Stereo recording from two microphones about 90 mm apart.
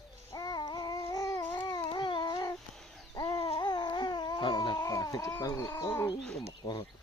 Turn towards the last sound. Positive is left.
turn(degrees=50)  # may be behind; listen again after turning